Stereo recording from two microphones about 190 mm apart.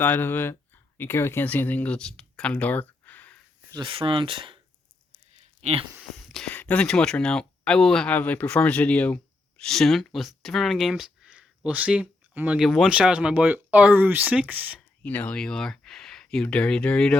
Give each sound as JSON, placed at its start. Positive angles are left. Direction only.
{"t": 0.0, "sound": "speech", "side_deg": 10}
{"t": 3.7, "sound": "speech", "side_deg": -25}
{"t": 6.0, "sound": "speech", "side_deg": 0}
{"t": 15.0, "sound": "speech", "side_deg": 5}